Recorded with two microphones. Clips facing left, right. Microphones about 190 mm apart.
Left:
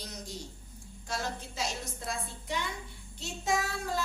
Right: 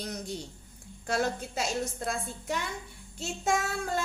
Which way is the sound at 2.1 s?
45° right (ahead or behind).